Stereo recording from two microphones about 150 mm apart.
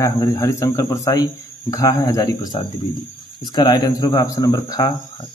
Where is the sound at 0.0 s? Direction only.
20° left (ahead or behind).